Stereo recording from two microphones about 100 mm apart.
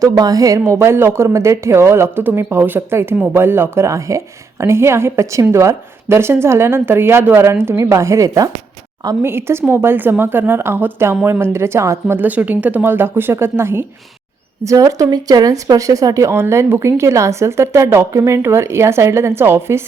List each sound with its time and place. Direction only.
0.0 s a woman's voice: 35° right (ahead or behind)